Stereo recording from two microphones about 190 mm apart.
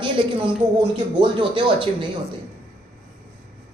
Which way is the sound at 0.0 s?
25° right (ahead or behind).